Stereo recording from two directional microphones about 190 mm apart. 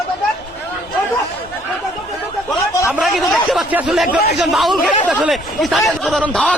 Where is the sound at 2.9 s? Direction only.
Centre (ahead or behind).